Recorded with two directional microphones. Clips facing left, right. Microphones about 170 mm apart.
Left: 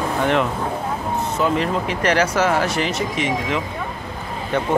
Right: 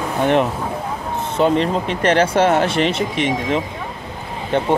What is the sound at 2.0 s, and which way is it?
Speech, 30° right (ahead or behind).